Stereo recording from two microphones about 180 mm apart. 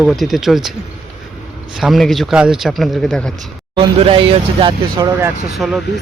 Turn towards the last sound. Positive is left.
turn(degrees=0)  # may be behind; listen again after turning